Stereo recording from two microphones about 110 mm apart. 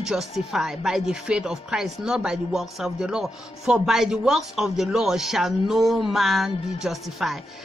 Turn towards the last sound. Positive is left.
turn(degrees=0)  # may be behind; listen again after turning